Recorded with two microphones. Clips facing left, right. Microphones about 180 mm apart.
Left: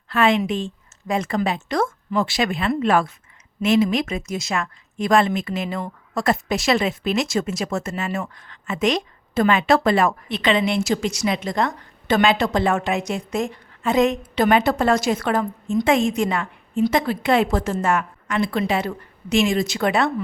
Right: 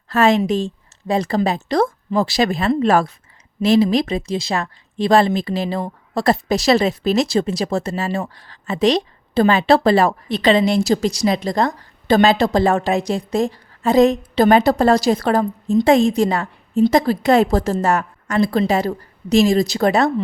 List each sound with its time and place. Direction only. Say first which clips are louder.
0.1 s a woman's voice: right 4 dB; 40° right (ahead or behind)